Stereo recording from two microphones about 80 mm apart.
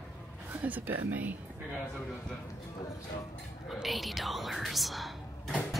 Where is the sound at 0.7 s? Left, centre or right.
Right.